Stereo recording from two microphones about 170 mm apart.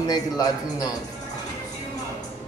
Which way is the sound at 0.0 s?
25° left (ahead or behind).